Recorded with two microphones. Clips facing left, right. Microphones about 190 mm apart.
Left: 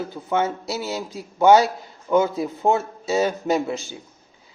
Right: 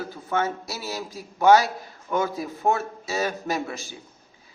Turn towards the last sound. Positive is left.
turn(degrees=25)  # may be behind; listen again after turning